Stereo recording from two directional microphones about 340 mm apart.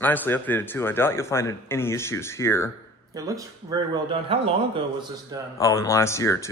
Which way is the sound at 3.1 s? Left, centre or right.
Centre.